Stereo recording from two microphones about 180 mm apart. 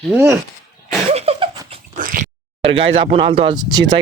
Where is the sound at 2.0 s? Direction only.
50° right (ahead or behind).